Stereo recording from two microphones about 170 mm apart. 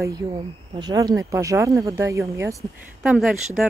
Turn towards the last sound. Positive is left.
turn(degrees=0)  # may be behind; listen again after turning